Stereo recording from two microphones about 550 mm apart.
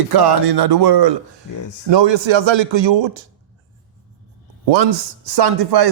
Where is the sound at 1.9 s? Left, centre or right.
Right.